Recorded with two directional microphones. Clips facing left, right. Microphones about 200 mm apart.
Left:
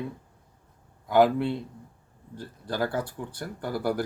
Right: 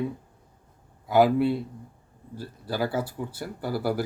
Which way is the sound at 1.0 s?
5° right (ahead or behind).